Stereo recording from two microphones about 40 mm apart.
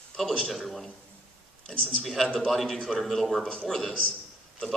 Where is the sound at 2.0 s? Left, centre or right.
Centre.